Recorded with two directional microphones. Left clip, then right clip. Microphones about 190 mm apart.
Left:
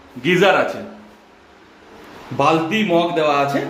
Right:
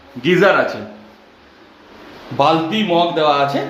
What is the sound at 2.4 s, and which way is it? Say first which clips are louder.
A man's voice: right 2 dB; 5° left (ahead or behind).